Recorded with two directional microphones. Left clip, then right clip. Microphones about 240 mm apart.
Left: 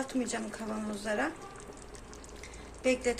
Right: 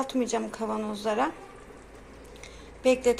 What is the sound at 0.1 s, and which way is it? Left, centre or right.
Speech, centre.